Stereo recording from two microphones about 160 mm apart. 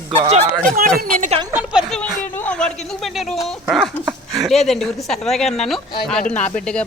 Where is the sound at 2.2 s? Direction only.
10° left (ahead or behind).